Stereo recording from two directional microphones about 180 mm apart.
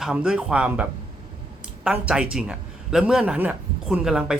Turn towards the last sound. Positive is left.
turn(degrees=-5)  # may be behind; listen again after turning